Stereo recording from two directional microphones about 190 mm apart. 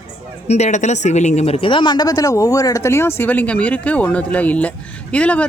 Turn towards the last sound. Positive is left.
turn(degrees=5)  # may be behind; listen again after turning